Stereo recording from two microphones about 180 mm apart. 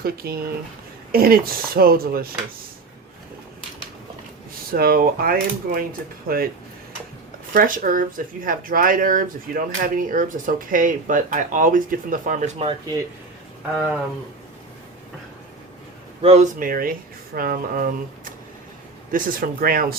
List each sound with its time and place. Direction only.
0.0 s speech: 55° right (ahead or behind)
4.7 s speech: 55° right (ahead or behind)
7.5 s speech: 50° right (ahead or behind)
16.2 s speech: 40° right (ahead or behind); by 20.0 s 55° right (ahead or behind)